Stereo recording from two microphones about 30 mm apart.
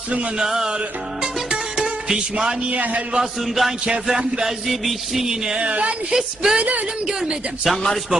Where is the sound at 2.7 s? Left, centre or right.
Right.